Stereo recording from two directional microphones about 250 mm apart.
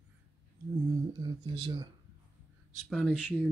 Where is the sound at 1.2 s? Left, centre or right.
Centre.